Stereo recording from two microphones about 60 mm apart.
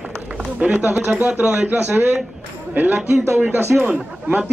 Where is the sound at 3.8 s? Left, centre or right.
Right.